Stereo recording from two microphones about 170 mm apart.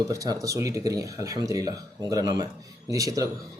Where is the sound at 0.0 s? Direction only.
20° right (ahead or behind).